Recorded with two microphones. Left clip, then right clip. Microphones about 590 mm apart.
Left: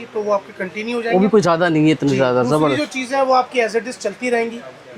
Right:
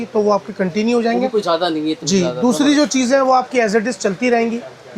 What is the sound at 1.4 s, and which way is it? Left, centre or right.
Speech, left.